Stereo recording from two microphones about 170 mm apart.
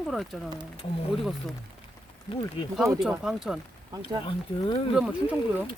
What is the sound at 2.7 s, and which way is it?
Speech, centre (ahead or behind).